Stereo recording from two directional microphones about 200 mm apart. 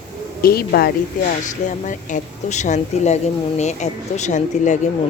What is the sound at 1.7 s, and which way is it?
Speech, 40° left (ahead or behind).